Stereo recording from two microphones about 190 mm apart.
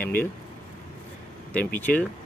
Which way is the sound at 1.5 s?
10° left (ahead or behind).